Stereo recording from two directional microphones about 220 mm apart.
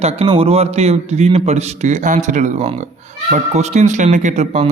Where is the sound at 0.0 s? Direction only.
30° right (ahead or behind).